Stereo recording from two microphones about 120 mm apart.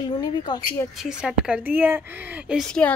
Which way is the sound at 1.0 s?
5° right (ahead or behind).